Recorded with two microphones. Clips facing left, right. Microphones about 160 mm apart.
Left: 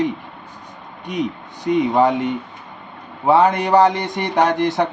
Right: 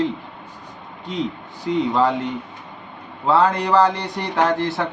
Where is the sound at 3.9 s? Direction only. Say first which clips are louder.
Left 4 dB; 75° left (ahead or behind).